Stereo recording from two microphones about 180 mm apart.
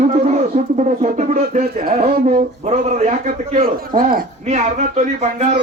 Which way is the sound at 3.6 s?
55° right (ahead or behind).